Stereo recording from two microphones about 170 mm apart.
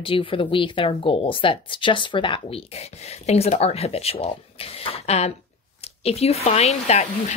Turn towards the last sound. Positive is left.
turn(degrees=40)  # may be behind; listen again after turning